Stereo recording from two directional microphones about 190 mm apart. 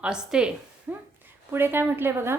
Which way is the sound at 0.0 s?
5° right (ahead or behind).